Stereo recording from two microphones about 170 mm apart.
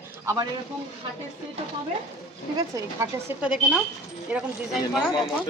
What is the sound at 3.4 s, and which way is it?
Speech, 5° right (ahead or behind).